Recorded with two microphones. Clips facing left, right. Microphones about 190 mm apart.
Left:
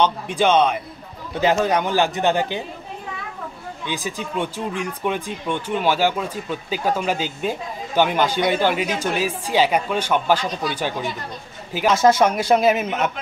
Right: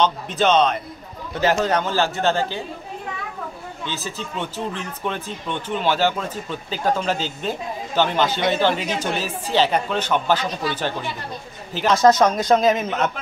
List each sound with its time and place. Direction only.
0.0 s speech: 10° left (ahead or behind)
3.8 s speech: 15° left (ahead or behind)